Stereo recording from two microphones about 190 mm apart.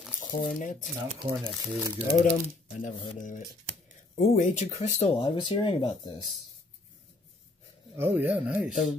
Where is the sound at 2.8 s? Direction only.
40° left (ahead or behind); by 6.2 s 25° left (ahead or behind).